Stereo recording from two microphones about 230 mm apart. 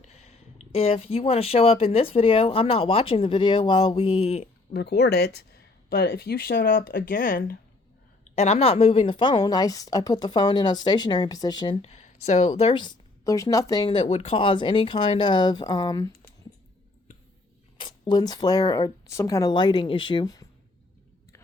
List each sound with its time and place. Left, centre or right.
0.0 s a woman's voice: left
4.7 s a woman's voice: left; by 16.1 s centre
17.7 s speech: centre